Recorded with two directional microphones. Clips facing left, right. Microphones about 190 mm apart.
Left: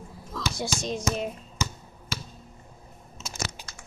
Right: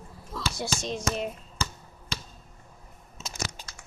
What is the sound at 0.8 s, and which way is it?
Speech, centre (ahead or behind).